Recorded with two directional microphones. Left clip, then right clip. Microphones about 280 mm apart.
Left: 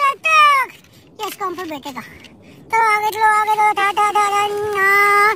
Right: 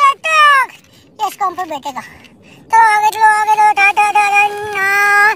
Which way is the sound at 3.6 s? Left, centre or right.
Centre.